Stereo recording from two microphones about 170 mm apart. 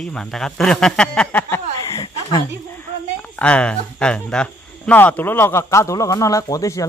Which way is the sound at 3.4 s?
5° left (ahead or behind).